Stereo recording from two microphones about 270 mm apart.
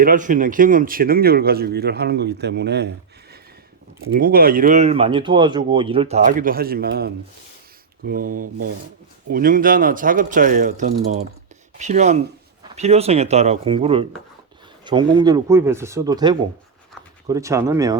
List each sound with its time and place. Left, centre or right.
0.0 s speech: right
4.1 s speech: right; by 17.9 s centre